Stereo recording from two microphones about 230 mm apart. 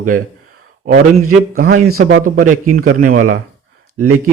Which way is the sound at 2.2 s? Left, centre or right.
Right.